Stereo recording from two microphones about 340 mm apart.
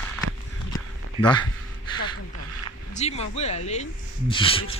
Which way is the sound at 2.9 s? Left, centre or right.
Centre.